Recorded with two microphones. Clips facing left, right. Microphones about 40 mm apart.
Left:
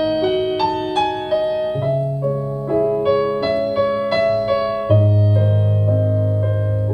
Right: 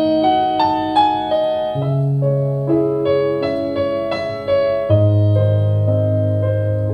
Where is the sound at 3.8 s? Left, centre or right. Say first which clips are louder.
Left 1 dB; centre.